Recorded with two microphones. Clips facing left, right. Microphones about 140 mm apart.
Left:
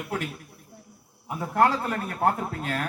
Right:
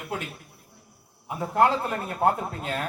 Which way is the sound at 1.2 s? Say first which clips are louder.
Right 1 dB; 20° right (ahead or behind).